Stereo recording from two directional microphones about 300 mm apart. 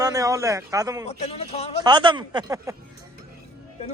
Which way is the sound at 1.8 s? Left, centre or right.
Centre.